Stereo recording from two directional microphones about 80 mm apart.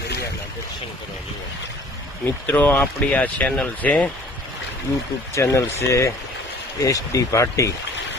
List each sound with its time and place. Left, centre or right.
2.2 s speech: left
5.3 s speech: left